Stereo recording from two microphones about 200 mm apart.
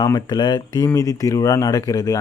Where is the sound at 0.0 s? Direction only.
20° left (ahead or behind).